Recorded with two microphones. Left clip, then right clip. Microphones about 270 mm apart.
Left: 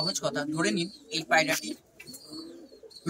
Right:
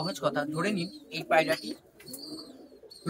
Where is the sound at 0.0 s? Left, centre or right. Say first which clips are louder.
Even; centre.